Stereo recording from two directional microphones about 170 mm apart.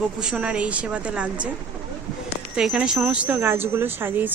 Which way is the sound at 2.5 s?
5° right (ahead or behind).